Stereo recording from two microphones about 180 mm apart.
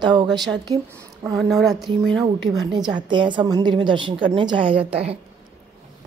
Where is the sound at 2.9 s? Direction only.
25° right (ahead or behind).